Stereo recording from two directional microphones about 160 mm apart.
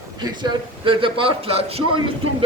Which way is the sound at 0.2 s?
30° right (ahead or behind).